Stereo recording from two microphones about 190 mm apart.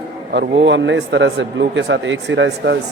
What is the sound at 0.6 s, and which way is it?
Speech, 70° right (ahead or behind).